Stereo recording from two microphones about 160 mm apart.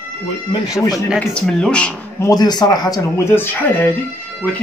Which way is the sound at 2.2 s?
25° left (ahead or behind).